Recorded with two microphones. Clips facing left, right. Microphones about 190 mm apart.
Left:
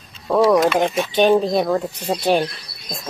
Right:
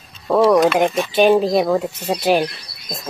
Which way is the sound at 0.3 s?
Centre (ahead or behind).